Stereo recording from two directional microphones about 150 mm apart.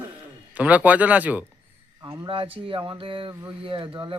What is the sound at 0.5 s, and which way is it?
Speech, 10° right (ahead or behind).